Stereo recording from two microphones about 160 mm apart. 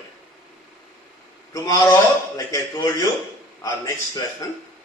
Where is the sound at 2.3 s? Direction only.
20° left (ahead or behind).